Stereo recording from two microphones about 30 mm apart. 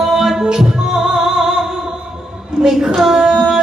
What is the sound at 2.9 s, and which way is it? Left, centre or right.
Female singing, centre.